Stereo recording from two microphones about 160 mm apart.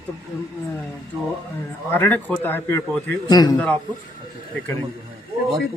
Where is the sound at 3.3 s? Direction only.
25° left (ahead or behind).